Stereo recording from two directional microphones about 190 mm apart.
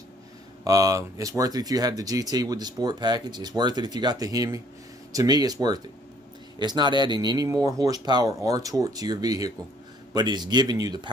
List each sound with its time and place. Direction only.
0.7 s speech: 15° right (ahead or behind)